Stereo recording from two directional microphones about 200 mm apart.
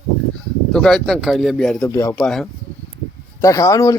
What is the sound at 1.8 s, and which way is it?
Speech, 15° left (ahead or behind).